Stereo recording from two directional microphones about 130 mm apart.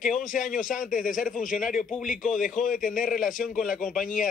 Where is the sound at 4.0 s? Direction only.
90° left.